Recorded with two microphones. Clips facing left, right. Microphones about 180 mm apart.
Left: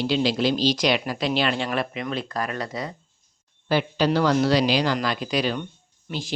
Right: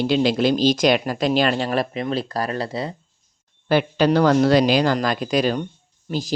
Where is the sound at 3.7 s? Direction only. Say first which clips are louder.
Right 4 dB; 55° right (ahead or behind).